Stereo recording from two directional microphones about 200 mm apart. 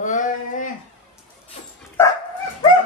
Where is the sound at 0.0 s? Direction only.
40° left (ahead or behind).